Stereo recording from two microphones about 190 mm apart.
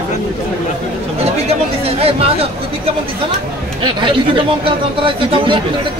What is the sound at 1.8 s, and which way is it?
Speech, 30° right (ahead or behind).